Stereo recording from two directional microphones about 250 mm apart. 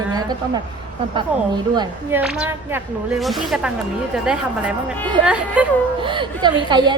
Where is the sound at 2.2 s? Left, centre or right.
Centre.